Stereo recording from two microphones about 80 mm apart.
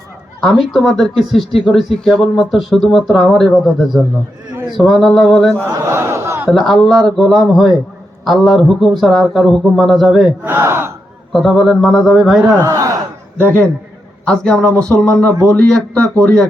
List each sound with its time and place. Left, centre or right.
0.4 s speech: centre
5.7 s speech: right
6.5 s speech: centre
10.4 s speech: right
11.3 s speech: centre
12.6 s a man's voice: right
14.3 s a man's voice: centre